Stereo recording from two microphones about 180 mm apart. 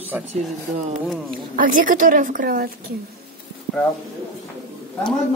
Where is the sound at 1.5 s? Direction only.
50° right (ahead or behind).